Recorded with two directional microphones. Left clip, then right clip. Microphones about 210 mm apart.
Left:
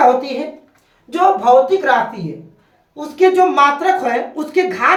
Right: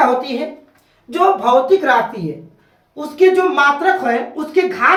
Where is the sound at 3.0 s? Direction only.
30° left (ahead or behind).